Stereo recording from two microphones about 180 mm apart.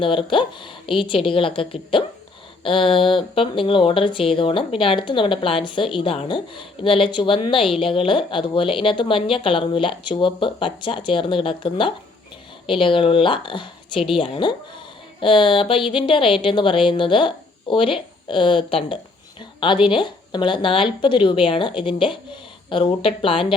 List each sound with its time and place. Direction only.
0.0 s speech: 30° left (ahead or behind)